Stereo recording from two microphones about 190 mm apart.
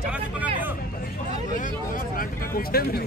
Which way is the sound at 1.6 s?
50° left (ahead or behind).